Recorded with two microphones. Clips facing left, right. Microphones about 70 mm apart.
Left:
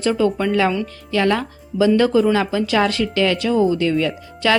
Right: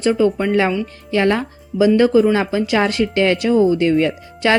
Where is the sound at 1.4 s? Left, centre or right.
Centre.